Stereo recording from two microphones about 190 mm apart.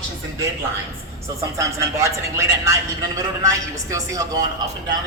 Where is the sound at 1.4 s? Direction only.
15° right (ahead or behind).